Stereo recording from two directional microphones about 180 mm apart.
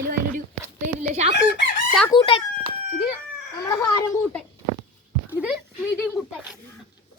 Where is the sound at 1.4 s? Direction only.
70° left (ahead or behind).